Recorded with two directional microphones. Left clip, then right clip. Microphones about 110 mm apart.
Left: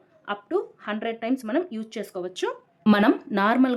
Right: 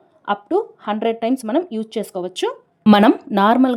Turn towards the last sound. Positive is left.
turn(degrees=-45)  # may be behind; listen again after turning